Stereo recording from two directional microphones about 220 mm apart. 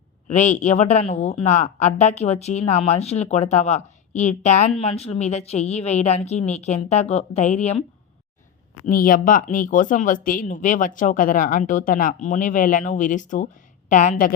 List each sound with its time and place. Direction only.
0.3 s a woman's voice: 35° left (ahead or behind)
8.9 s speech: 40° left (ahead or behind)